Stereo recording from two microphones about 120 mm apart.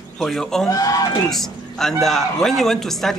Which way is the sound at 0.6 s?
30° left (ahead or behind).